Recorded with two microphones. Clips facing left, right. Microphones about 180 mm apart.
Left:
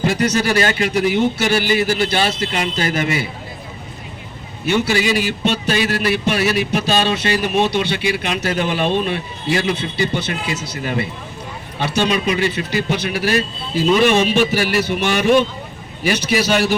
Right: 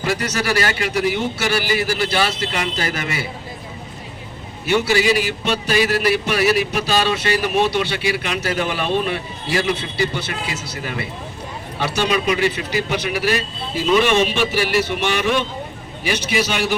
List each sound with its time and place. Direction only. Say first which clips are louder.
0.0 s a man's voice: left 5 dB; 20° left (ahead or behind)
4.6 s a man's voice: even; 20° left (ahead or behind)